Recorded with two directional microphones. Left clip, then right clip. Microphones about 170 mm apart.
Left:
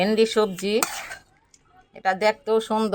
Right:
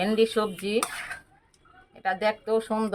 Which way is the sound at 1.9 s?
35° left (ahead or behind).